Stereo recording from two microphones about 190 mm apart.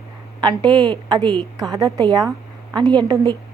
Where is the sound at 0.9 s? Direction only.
20° right (ahead or behind).